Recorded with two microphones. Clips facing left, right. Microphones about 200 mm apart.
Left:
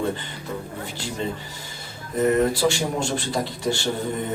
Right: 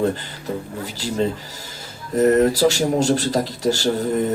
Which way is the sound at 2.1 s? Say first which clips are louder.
Right 5 dB; 40° right (ahead or behind).